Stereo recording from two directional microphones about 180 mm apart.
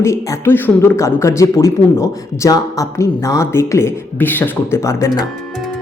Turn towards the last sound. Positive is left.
turn(degrees=15)  # may be behind; listen again after turning